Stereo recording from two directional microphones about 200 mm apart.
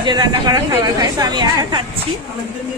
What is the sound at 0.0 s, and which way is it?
Speech, 20° right (ahead or behind).